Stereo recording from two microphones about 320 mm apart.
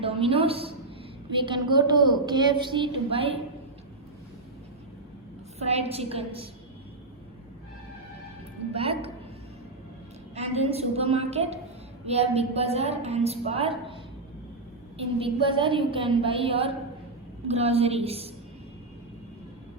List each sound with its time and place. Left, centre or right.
0.0 s a woman's voice: centre
5.5 s a woman's voice: centre
8.7 s a woman's voice: centre
10.3 s a woman's voice: centre
14.9 s a woman's voice: centre